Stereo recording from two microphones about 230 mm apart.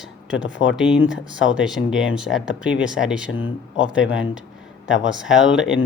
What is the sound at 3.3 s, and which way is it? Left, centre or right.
Speech, left.